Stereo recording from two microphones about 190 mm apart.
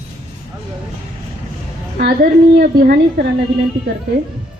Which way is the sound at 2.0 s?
50° right (ahead or behind).